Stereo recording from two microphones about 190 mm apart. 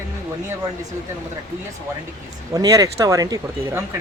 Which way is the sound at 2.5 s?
20° right (ahead or behind).